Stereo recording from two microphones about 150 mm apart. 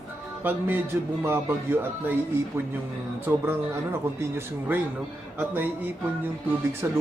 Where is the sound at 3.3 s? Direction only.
15° right (ahead or behind).